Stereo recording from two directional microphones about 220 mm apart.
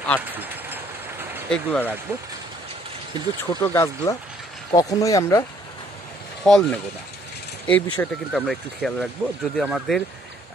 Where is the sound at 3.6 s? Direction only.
10° left (ahead or behind).